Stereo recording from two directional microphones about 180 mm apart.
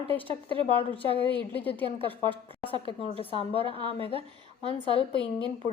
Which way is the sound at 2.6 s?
30° left (ahead or behind).